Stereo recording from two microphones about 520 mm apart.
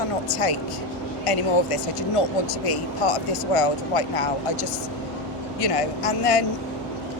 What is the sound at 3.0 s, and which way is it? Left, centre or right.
Speech, left.